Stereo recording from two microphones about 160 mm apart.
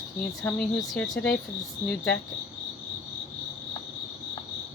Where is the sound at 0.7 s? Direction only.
Centre (ahead or behind).